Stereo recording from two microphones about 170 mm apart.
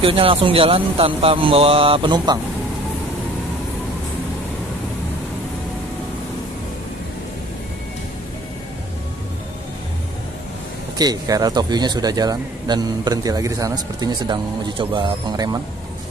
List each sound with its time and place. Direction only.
0.0 s a man's voice: 30° right (ahead or behind)
11.0 s speech: 20° right (ahead or behind)